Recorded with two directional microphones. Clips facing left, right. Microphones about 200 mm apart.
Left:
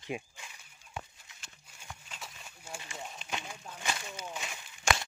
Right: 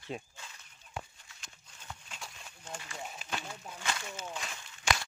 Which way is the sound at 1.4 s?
5° left (ahead or behind).